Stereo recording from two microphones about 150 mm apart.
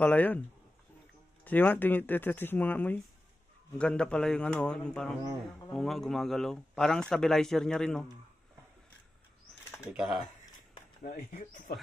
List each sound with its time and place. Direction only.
0.0 s speech: 10° left (ahead or behind)
1.4 s a man's voice: 10° left (ahead or behind)
9.9 s a man's voice: 5° right (ahead or behind)
11.1 s speech: 65° left (ahead or behind)